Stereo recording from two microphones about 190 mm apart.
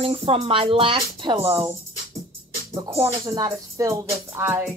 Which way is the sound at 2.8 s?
15° right (ahead or behind).